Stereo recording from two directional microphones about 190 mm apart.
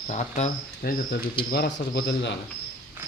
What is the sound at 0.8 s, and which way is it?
A man's voice, 55° left (ahead or behind).